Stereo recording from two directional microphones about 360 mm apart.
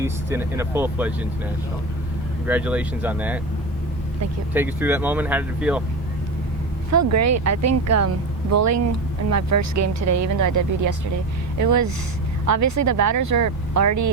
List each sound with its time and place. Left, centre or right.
0.0 s speech: centre
2.5 s speech: centre
4.5 s speech: centre
7.1 s speech: right